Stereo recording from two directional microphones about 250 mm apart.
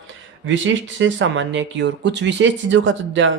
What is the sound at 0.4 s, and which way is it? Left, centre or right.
Speech, right.